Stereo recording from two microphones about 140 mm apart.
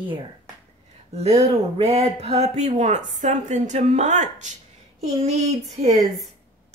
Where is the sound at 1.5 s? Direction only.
50° right (ahead or behind).